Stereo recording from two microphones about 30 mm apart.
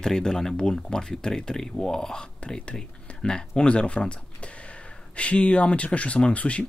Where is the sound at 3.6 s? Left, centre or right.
Left.